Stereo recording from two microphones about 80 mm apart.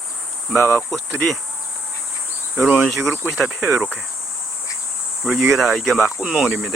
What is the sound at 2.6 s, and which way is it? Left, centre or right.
Cricket, right.